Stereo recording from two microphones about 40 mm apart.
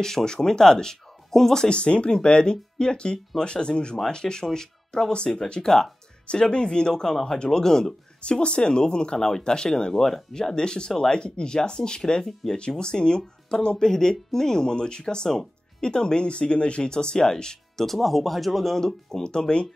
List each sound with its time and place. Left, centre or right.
0.0 s speech: centre
1.7 s speech: left
5.1 s speech: left
5.6 s speech: centre
6.2 s speech: left
8.2 s speech: left
17.8 s speech: centre
19.2 s speech: left